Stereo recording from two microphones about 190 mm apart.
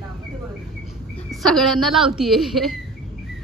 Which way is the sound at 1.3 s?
Centre (ahead or behind).